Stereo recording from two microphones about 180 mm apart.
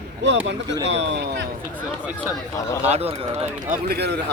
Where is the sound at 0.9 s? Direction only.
80° right.